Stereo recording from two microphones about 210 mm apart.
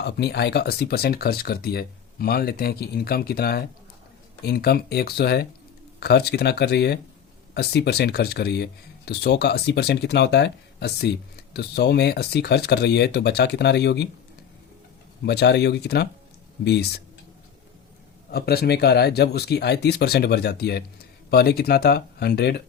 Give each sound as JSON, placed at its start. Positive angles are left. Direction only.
{"t": 0.0, "sound": "speech", "side_deg": 50}
{"t": 15.2, "sound": "speech", "side_deg": 50}
{"t": 18.3, "sound": "speech", "side_deg": 50}